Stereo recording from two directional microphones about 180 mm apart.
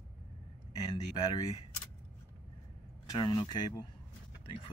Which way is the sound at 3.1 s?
20° left (ahead or behind).